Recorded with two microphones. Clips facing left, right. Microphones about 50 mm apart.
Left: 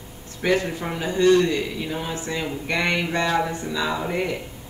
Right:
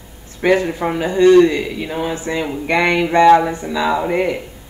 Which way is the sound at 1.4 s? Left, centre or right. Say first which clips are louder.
Right 7 dB; right.